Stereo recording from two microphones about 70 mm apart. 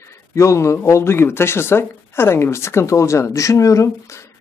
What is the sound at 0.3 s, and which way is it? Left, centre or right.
Speech, left.